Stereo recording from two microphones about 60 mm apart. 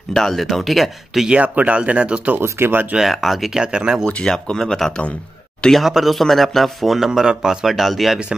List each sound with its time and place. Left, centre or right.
0.1 s speech: centre
1.3 s speech: right
2.4 s speech: right
3.0 s speech: centre
3.5 s speech: centre
4.0 s speech: centre
5.7 s speech: centre